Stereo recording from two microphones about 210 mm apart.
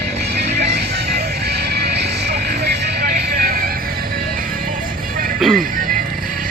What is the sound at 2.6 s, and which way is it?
Vehicle, 45° right (ahead or behind).